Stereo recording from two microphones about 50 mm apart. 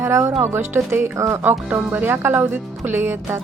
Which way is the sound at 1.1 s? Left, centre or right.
Right.